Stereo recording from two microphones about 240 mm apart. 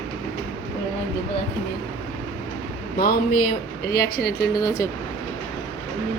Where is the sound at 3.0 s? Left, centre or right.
Left.